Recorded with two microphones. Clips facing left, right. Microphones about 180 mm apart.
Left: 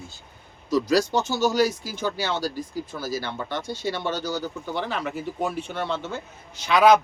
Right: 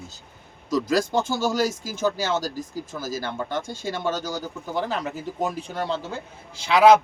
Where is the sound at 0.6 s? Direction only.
50° right (ahead or behind).